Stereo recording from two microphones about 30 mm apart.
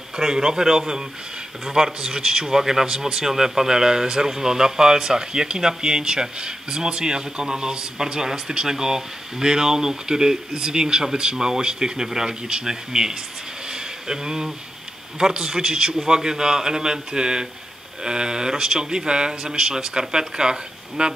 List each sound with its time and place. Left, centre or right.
0.2 s speech: right
12.3 s speech: right
12.6 s speech: right
13.7 s a sound: right
15.1 s speech: right